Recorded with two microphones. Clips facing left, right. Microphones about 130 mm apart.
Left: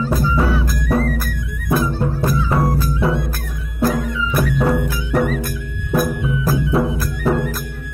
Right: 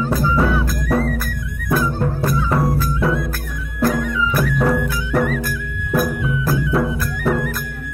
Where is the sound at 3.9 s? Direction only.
25° left (ahead or behind).